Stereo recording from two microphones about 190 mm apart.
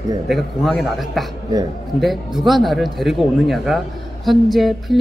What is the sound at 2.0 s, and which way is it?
Speech, centre (ahead or behind).